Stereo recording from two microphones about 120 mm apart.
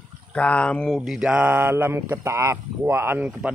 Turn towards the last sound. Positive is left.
turn(degrees=-10)  # may be behind; listen again after turning